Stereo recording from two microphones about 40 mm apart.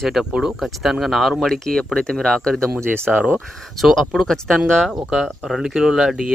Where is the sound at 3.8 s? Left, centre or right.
Centre.